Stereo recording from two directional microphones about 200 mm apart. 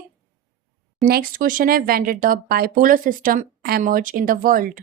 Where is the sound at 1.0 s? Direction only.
50° right (ahead or behind).